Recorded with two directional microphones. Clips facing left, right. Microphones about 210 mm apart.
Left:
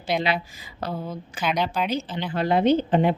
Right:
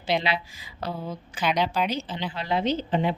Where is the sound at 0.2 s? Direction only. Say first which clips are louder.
Left 3 dB; 50° left (ahead or behind).